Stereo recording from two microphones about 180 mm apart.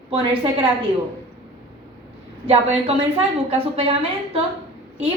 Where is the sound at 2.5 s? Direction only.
35° right (ahead or behind).